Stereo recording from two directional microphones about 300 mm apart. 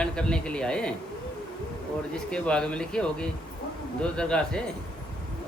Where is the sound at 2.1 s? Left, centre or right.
Centre.